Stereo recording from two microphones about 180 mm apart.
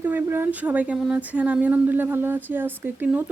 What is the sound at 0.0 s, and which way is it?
Speech, 10° right (ahead or behind).